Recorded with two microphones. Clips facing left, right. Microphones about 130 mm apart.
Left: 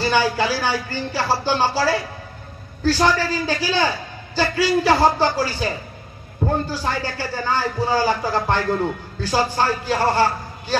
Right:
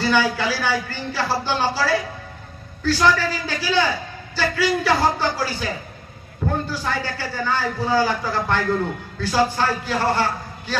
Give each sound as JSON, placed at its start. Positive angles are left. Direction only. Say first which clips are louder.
{"t": 0.0, "sound": "a man's voice", "louder": "left 1 dB", "side_deg": 40}